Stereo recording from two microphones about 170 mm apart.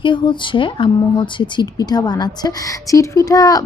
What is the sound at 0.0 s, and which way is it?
Speech, 30° left (ahead or behind).